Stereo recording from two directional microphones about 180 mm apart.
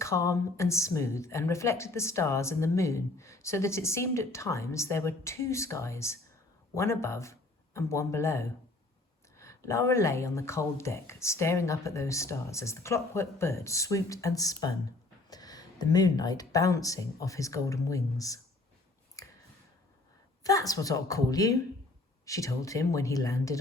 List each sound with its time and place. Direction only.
0.0 s speech: 15° left (ahead or behind)
19.2 s a sound: 20° left (ahead or behind)
20.4 s speech: 20° left (ahead or behind)